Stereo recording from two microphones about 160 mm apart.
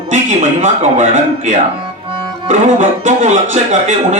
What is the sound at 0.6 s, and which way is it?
A man's voice, 50° right (ahead or behind).